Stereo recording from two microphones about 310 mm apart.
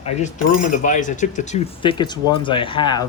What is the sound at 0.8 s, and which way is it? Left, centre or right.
Speech, left.